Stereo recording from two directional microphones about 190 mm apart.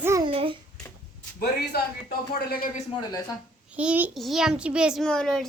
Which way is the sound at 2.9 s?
20° left (ahead or behind).